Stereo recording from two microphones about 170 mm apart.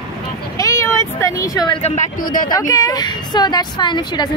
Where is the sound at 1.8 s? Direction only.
50° left (ahead or behind).